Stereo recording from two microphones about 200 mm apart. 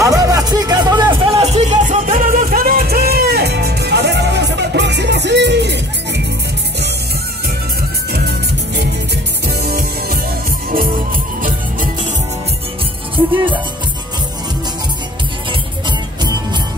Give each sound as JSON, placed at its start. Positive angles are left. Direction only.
{"t": 0.0, "sound": "music", "side_deg": -15}
{"t": 8.1, "sound": "music", "side_deg": -55}
{"t": 13.1, "sound": "music", "side_deg": -25}